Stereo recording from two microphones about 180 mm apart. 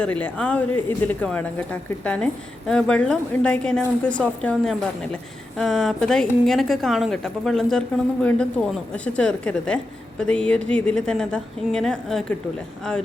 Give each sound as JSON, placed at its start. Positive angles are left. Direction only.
{"t": 0.0, "sound": "a woman's voice", "side_deg": 10}